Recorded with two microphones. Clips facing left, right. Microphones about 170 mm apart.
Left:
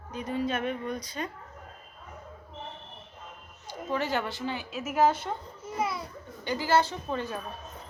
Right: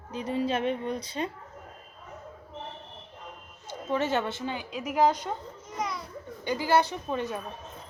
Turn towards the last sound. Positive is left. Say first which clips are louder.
# right 2 dB
turn(degrees=-20)  # may be behind; listen again after turning